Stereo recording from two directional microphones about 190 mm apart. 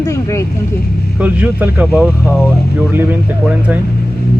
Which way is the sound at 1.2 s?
10° right (ahead or behind).